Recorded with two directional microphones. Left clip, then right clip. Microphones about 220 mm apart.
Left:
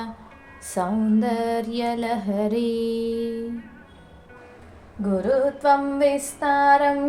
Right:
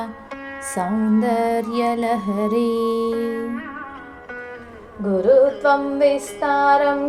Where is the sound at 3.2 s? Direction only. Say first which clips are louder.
Right 4 dB; 35° right (ahead or behind).